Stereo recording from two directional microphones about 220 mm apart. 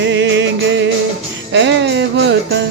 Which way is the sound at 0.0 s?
55° right (ahead or behind).